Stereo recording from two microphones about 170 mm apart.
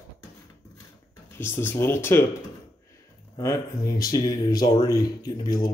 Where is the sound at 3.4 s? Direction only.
20° left (ahead or behind).